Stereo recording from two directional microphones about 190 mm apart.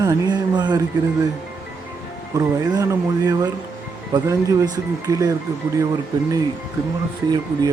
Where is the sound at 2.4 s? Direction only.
20° right (ahead or behind).